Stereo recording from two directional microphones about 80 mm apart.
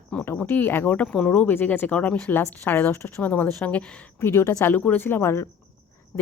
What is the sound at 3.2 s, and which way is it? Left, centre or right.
Speech, centre.